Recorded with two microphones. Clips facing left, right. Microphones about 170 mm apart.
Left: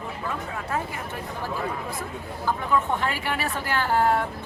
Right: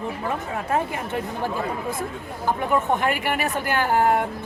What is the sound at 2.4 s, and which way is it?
A man's voice, 20° right (ahead or behind).